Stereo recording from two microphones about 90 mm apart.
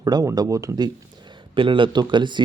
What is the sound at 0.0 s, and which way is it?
Speech, 40° right (ahead or behind).